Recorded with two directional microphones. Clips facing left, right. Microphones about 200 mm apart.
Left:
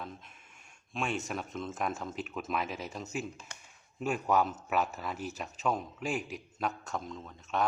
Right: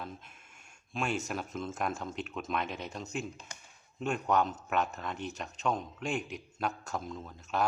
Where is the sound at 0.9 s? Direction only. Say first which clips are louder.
Right 1 dB; centre (ahead or behind).